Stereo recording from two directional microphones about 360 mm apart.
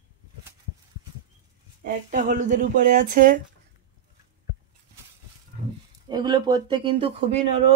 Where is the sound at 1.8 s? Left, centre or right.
Right.